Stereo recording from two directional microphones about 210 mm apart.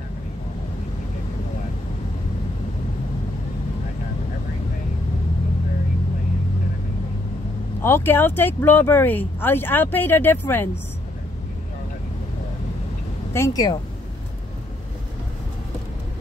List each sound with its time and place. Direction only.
7.8 s speech: 10° left (ahead or behind)
13.3 s speech: 15° left (ahead or behind)